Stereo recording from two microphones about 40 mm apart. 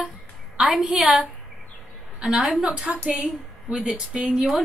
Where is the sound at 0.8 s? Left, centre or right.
Centre.